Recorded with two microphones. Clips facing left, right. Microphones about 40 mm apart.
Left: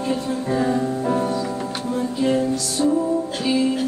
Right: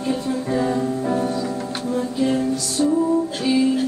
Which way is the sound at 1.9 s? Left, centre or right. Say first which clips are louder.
Even; centre.